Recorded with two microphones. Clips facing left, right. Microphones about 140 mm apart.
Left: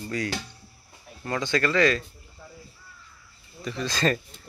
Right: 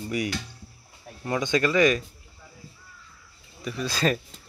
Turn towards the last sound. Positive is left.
turn(degrees=-5)  # may be behind; listen again after turning